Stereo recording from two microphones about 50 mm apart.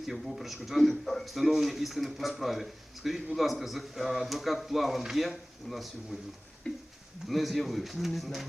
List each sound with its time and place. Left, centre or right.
0.1 s speech: centre
6.7 s a sound: centre
7.3 s speech: centre